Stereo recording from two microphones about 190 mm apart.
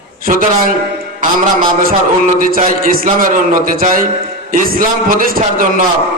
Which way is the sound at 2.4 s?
45° right (ahead or behind).